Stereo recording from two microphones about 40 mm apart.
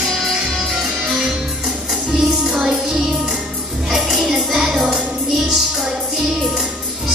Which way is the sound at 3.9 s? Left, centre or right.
Centre.